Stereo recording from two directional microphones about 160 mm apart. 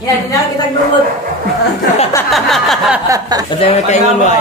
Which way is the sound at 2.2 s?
Centre (ahead or behind).